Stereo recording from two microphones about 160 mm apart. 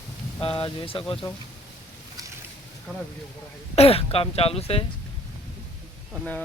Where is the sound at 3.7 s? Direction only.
40° left (ahead or behind).